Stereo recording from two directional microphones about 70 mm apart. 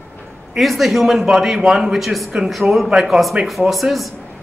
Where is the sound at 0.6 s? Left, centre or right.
Centre.